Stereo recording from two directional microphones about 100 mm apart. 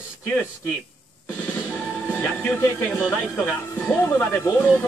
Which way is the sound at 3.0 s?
5° left (ahead or behind).